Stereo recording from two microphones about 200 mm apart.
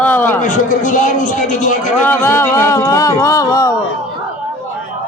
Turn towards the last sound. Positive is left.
turn(degrees=15)  # may be behind; listen again after turning